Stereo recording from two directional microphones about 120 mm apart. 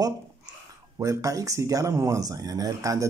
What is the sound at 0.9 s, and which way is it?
Speech, 30° right (ahead or behind).